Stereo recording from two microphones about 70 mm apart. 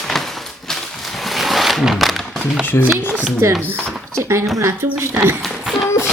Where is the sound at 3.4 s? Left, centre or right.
Right.